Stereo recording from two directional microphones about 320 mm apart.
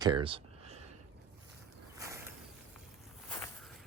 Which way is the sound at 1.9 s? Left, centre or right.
Centre.